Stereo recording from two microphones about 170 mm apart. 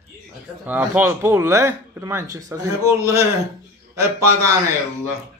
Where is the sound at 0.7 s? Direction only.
10° right (ahead or behind).